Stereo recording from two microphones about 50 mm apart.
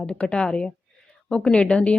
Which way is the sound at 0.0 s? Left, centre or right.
Centre.